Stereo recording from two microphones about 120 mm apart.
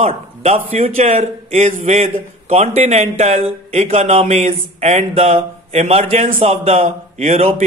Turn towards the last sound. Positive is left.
turn(degrees=-60)  # may be behind; listen again after turning